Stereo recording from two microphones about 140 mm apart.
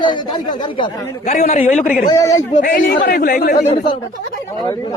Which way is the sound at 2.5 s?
70° left (ahead or behind).